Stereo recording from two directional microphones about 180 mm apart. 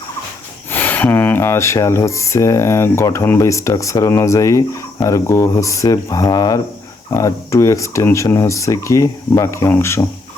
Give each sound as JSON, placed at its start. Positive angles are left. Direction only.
{"t": 0.7, "sound": "speech", "side_deg": 10}